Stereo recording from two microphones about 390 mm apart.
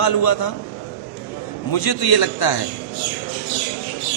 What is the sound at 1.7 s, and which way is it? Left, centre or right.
Speech, left.